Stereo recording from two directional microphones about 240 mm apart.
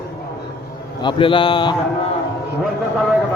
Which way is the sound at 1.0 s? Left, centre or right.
Left.